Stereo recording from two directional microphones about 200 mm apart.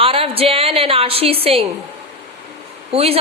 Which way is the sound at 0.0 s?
30° right (ahead or behind).